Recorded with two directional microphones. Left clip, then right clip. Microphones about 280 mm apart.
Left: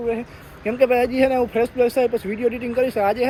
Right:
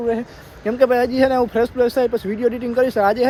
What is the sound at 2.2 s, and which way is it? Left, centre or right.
Speech, right.